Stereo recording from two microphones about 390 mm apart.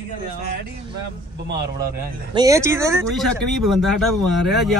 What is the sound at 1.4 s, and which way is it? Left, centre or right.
Speech, right.